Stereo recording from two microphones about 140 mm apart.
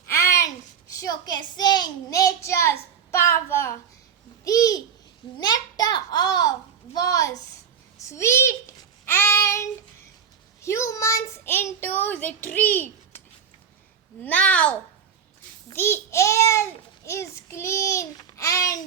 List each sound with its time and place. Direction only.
0.1 s a sound: 20° left (ahead or behind)
0.9 s child singing: 25° left (ahead or behind)
4.4 s babbling: 25° left (ahead or behind)
5.4 s a sound: 30° left (ahead or behind)
9.0 s child singing: 20° left (ahead or behind)
14.2 s speech: 10° left (ahead or behind)
15.7 s child singing: 15° left (ahead or behind)
17.1 s a sound: 20° left (ahead or behind)
18.3 s babbling: 25° left (ahead or behind)